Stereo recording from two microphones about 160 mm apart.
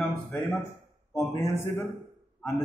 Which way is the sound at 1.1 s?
15° left (ahead or behind).